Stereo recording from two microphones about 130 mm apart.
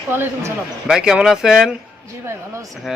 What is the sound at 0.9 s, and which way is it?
Speech, 5° right (ahead or behind).